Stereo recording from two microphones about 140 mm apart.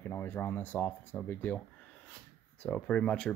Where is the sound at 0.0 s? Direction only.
15° left (ahead or behind).